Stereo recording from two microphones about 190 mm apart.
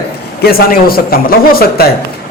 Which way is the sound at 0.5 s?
50° left (ahead or behind).